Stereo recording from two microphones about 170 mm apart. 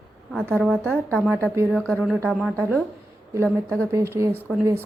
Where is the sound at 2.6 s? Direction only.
10° left (ahead or behind).